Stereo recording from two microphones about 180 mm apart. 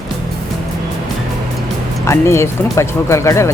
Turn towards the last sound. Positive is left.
turn(degrees=15)  # may be behind; listen again after turning